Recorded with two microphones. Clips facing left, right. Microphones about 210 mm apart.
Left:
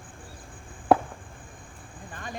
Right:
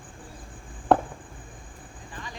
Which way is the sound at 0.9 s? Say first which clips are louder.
Even; 5° left (ahead or behind).